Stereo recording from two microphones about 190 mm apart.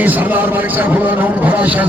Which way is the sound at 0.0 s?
10° right (ahead or behind).